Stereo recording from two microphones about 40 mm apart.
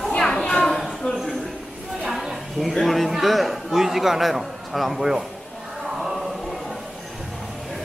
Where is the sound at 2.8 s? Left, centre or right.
Centre.